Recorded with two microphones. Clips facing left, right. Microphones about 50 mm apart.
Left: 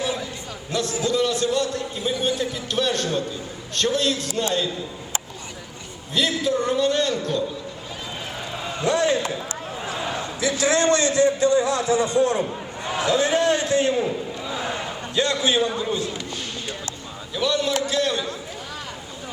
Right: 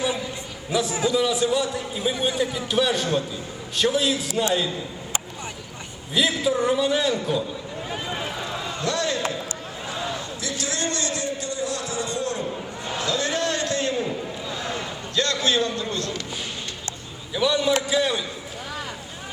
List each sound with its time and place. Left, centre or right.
0.7 s a man's voice: centre
6.1 s a man's voice: centre
8.4 s a sound: centre
8.9 s a man's voice: left
17.3 s a man's voice: centre